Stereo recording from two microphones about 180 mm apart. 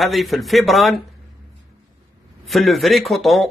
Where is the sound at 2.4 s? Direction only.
Centre (ahead or behind).